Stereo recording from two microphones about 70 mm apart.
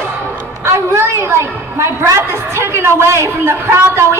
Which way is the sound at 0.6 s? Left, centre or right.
Right.